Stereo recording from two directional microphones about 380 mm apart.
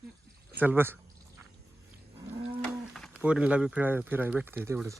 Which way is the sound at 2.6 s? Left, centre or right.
Centre.